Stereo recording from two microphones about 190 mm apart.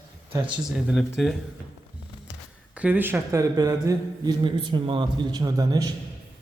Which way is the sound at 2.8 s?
10° right (ahead or behind).